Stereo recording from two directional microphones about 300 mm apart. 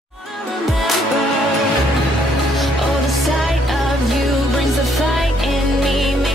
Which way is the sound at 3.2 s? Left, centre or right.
Centre.